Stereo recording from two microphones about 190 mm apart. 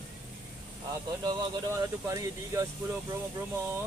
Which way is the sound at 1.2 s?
20° right (ahead or behind).